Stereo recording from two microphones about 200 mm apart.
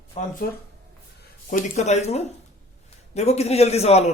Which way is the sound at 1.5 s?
35° left (ahead or behind).